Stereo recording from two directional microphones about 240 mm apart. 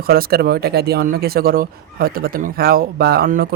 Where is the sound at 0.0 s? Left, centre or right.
Right.